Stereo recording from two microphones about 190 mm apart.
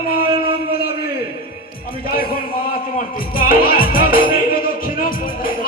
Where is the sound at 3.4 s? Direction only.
50° left (ahead or behind).